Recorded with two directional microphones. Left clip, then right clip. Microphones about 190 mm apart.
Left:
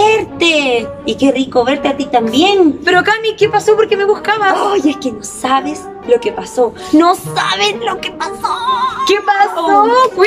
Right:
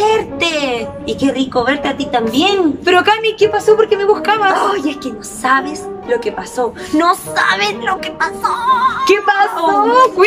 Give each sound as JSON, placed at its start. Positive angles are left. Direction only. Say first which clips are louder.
{"t": 0.0, "sound": "a woman's voice", "louder": "left 3 dB", "side_deg": 15}
{"t": 2.8, "sound": "a woman's voice", "louder": "even", "side_deg": -5}
{"t": 4.6, "sound": "a woman's voice", "louder": "left 2 dB", "side_deg": 15}
{"t": 9.0, "sound": "a woman's voice", "louder": "even", "side_deg": -5}